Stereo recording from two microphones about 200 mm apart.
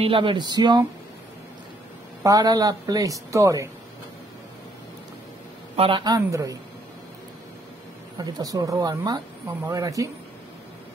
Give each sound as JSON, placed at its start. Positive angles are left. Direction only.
{"t": 0.0, "sound": "speech", "side_deg": -25}
{"t": 2.2, "sound": "speech", "side_deg": -20}
{"t": 5.8, "sound": "speech", "side_deg": -25}
{"t": 8.2, "sound": "speech", "side_deg": -20}